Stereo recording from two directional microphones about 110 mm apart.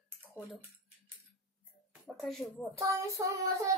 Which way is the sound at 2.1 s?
Centre (ahead or behind).